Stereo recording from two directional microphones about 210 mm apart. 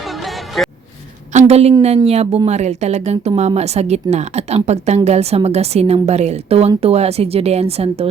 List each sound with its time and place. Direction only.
0.0 s music: centre (ahead or behind)
1.3 s a woman's voice: 30° right (ahead or behind)